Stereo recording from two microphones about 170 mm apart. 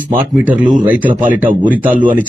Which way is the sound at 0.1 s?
10° right (ahead or behind).